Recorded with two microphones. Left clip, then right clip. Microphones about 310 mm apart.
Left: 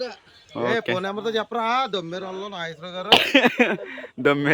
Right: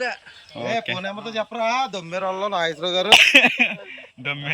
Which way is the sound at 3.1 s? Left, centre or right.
Centre.